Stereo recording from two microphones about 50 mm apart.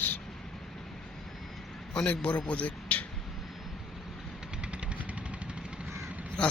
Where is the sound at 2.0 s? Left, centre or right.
Left.